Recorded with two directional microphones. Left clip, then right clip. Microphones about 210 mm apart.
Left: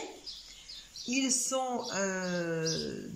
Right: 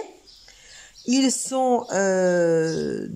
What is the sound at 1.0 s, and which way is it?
Speech, 35° right (ahead or behind).